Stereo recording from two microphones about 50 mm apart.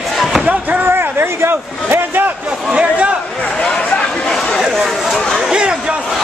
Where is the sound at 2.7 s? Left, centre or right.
Right.